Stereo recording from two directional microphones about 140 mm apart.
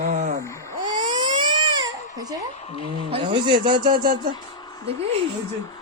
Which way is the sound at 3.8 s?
90° right.